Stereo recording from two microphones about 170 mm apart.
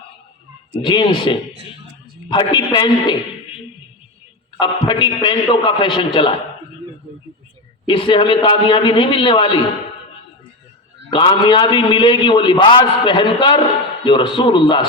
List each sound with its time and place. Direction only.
0.8 s a man's voice: 25° left (ahead or behind)
4.6 s a man's voice: 25° left (ahead or behind)
7.9 s a man's voice: 30° left (ahead or behind)
11.1 s a man's voice: 25° left (ahead or behind)